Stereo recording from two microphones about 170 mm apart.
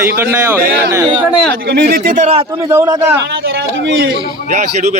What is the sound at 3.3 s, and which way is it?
Speech, 75° right (ahead or behind).